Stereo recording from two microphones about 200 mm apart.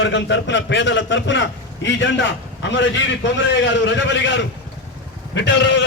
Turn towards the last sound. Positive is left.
turn(degrees=65)  # may be behind; listen again after turning